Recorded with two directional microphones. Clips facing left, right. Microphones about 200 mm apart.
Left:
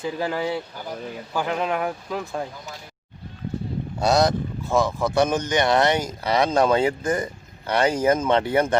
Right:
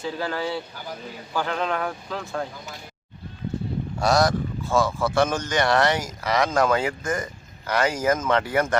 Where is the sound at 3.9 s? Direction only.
20° left (ahead or behind).